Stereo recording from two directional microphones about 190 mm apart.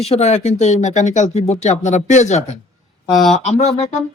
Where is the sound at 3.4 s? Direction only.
35° left (ahead or behind).